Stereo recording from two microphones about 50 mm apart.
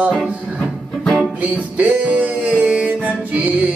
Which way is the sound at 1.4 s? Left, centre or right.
Right.